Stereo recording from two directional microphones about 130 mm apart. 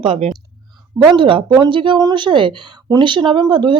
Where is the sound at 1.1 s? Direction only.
40° right (ahead or behind).